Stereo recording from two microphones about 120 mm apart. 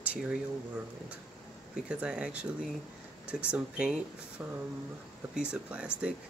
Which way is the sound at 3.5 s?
10° right (ahead or behind).